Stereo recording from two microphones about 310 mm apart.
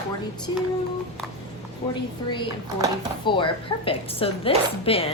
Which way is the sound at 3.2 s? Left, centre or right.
Centre.